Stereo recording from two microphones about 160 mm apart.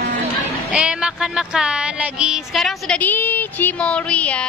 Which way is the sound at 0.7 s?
5° right (ahead or behind).